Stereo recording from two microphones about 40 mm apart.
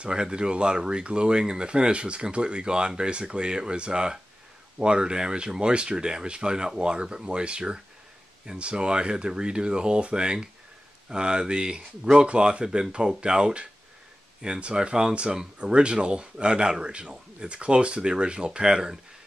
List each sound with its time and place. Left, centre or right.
0.0 s speech: right